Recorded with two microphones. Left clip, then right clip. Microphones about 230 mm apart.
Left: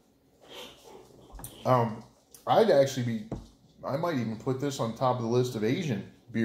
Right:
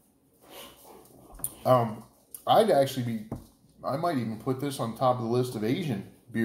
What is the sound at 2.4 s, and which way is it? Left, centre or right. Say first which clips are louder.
Speech: right 1 dB; centre.